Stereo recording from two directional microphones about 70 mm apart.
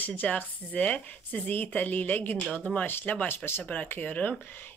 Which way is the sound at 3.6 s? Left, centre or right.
Left.